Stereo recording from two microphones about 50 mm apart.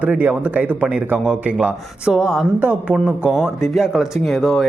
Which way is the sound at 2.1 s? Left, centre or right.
Centre.